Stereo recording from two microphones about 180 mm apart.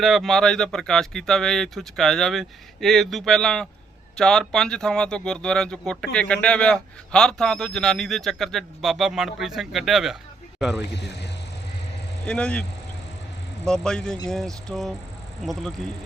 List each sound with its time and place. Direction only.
0.0 s speech: centre (ahead or behind)
10.9 s speech: 70° left (ahead or behind)
12.2 s speech: 5° left (ahead or behind)
13.8 s speech: 5° left (ahead or behind)